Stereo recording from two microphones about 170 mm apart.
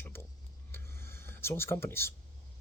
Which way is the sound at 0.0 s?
15° left (ahead or behind).